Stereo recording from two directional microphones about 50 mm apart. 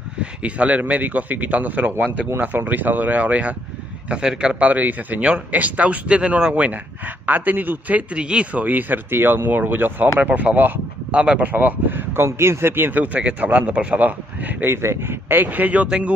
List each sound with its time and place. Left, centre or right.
0.2 s a man's voice: right
4.1 s speech: centre
4.6 s a man's voice: right
7.2 s a man's voice: right
8.1 s speech: right
8.5 s a man's voice: right
10.1 s a man's voice: right
11.4 s speech: right
12.3 s speech: right
13.0 s speech: right
14.7 s speech: right